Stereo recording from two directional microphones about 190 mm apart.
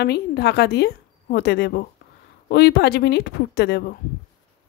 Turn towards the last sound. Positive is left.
turn(degrees=60)  # may be behind; listen again after turning